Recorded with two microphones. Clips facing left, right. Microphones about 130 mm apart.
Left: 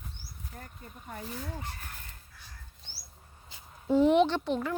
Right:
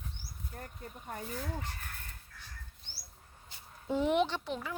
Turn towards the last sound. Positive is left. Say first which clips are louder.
# left 7 dB
turn(degrees=-5)  # may be behind; listen again after turning